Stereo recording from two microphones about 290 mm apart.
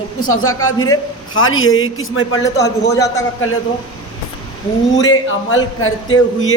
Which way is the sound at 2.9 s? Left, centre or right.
Centre.